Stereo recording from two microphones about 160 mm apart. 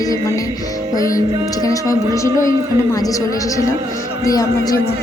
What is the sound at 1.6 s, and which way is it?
A woman's voice, 20° left (ahead or behind).